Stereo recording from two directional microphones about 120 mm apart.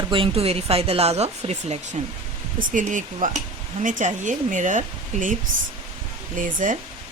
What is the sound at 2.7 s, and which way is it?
Speech, 90° right.